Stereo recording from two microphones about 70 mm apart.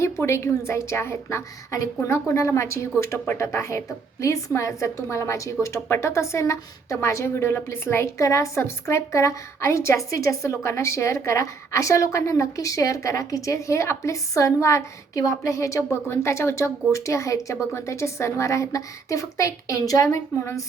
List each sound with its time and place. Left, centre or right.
0.0 s a woman's voice: left